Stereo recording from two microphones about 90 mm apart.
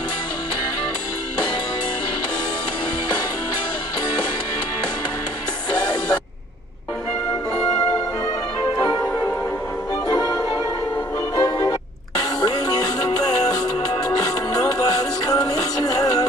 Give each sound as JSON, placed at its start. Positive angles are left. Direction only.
{"t": 5.7, "sound": "music", "side_deg": 50}
{"t": 8.7, "sound": "music", "side_deg": 40}